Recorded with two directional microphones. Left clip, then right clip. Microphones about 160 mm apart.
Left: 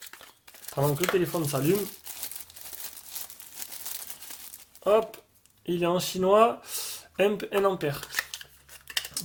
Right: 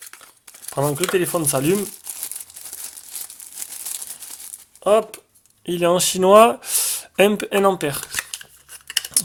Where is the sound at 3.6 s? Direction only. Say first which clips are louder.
Right 6 dB; 10° right (ahead or behind).